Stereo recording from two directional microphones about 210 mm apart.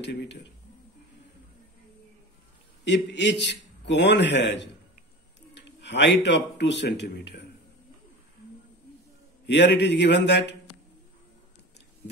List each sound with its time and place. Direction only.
0.0 s a man's voice: 55° left (ahead or behind)
2.8 s a man's voice: 55° left (ahead or behind)
5.8 s a man's voice: 55° left (ahead or behind)
9.5 s a man's voice: 55° left (ahead or behind)